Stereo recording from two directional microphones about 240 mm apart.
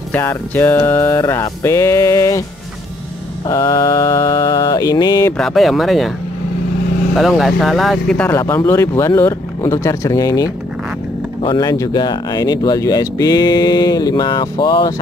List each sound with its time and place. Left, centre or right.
0.1 s speech: centre
3.4 s speech: centre
5.4 s speech: centre
7.2 s speech: centre